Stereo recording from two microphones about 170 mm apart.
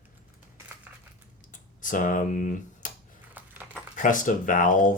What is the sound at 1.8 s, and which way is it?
Speech, 50° left (ahead or behind).